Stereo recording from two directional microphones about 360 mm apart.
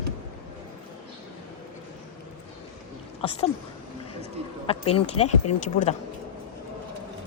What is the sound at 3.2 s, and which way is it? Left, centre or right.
Speech, centre.